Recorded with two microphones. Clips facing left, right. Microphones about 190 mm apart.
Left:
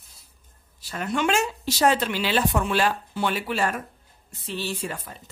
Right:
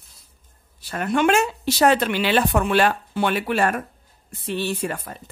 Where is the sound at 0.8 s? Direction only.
55° right (ahead or behind).